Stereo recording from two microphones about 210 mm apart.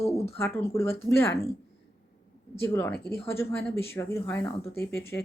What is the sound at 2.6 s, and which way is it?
Speech, 10° left (ahead or behind).